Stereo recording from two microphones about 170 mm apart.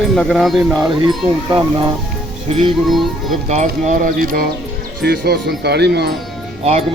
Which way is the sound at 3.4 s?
45° right (ahead or behind).